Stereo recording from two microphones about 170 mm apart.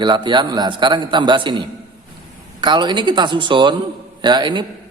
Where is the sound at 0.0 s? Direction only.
25° right (ahead or behind).